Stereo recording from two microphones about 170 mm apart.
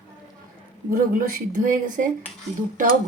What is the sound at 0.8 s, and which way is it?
A woman's voice, 55° right (ahead or behind).